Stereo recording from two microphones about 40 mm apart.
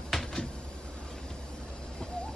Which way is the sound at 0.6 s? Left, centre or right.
Left.